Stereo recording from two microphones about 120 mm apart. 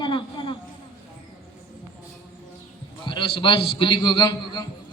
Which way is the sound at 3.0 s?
45° left (ahead or behind).